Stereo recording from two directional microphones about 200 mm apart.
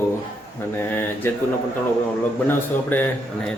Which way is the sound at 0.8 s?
10° left (ahead or behind).